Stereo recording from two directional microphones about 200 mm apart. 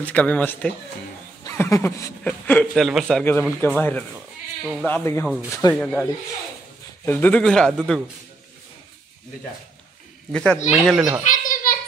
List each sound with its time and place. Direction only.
0.0 s speech: 5° left (ahead or behind)
7.1 s speech: 10° left (ahead or behind)
10.3 s speech: 5° left (ahead or behind)
11.2 s a sound: 40° left (ahead or behind)